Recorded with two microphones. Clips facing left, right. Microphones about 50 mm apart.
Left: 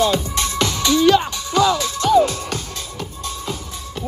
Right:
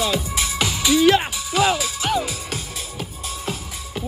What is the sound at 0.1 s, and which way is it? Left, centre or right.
Music, centre.